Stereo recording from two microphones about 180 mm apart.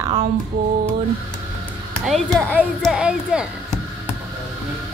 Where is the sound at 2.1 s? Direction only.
5° left (ahead or behind).